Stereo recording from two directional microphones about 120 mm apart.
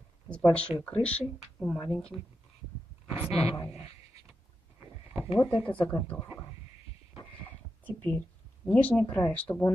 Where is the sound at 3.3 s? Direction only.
55° left (ahead or behind).